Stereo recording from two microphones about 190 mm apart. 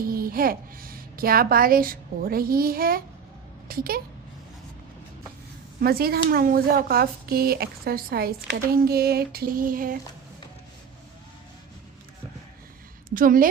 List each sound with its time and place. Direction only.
0.0 s a woman's voice: 50° right (ahead or behind)
5.8 s speech: 50° right (ahead or behind)
13.1 s a woman's voice: 45° right (ahead or behind)